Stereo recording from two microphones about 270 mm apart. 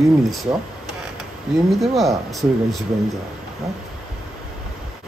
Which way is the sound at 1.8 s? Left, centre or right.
Centre.